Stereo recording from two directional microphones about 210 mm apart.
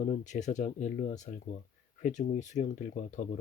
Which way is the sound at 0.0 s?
35° left (ahead or behind).